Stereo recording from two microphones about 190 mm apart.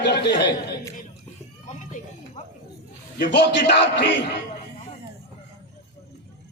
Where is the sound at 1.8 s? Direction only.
40° left (ahead or behind).